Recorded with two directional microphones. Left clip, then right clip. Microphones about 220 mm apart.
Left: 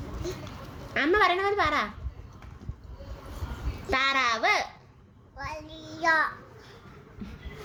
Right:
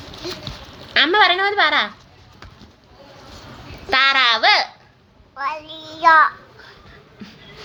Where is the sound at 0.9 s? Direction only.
10° left (ahead or behind).